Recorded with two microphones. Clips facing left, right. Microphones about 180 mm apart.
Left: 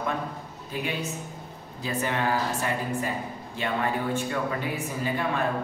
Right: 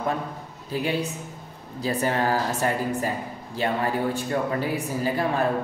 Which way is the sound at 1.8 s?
35° right (ahead or behind).